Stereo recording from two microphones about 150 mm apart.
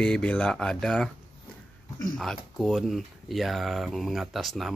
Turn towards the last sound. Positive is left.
turn(degrees=0)  # may be behind; listen again after turning